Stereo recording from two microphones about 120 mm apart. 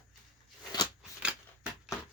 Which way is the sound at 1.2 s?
10° right (ahead or behind).